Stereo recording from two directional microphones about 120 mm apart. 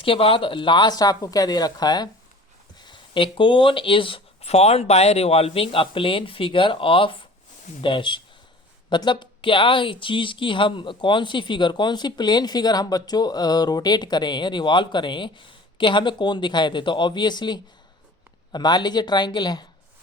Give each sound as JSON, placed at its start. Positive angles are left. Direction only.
{"t": 0.0, "sound": "speech", "side_deg": 50}